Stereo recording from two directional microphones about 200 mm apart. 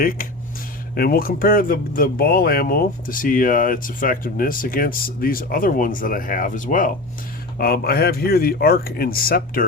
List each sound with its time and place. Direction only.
0.0 s speech: 45° left (ahead or behind)